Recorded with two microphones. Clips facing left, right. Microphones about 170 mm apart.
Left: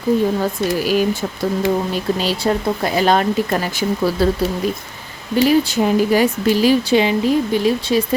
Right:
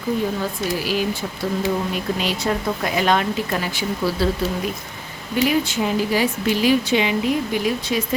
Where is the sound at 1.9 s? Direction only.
35° left (ahead or behind).